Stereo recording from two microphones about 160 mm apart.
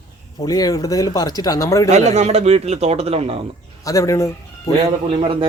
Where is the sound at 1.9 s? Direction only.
45° right (ahead or behind).